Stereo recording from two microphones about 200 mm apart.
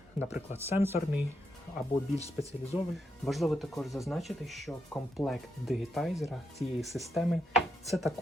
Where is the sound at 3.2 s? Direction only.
Centre (ahead or behind).